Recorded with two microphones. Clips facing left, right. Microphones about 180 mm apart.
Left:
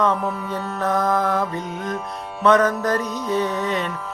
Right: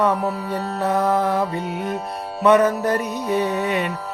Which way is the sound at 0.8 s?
10° right (ahead or behind).